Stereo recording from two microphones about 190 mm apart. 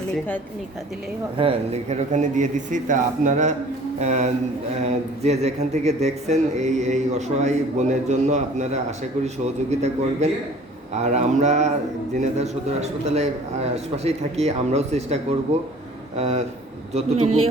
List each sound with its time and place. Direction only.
1.4 s speech: 30° right (ahead or behind)